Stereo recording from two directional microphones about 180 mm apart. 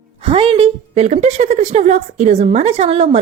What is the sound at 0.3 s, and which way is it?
A woman's voice, 30° right (ahead or behind).